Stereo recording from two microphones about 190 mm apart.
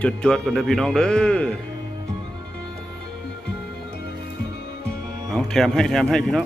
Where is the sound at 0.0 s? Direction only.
5° left (ahead or behind).